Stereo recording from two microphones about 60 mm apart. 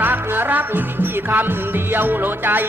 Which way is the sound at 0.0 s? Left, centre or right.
Right.